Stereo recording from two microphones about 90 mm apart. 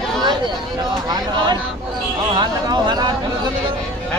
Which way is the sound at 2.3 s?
55° right (ahead or behind).